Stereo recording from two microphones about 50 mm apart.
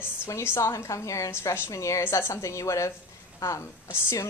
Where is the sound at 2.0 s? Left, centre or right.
Left.